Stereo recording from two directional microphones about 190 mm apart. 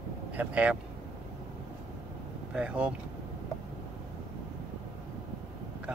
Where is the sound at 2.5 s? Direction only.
5° right (ahead or behind).